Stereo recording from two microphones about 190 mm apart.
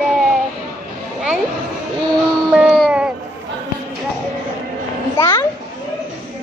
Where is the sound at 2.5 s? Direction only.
5° right (ahead or behind).